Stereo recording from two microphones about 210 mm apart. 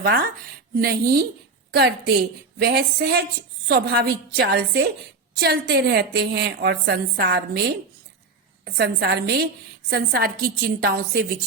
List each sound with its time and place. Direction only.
0.0 s a woman's voice: 45° right (ahead or behind)
8.6 s a woman's voice: 50° right (ahead or behind)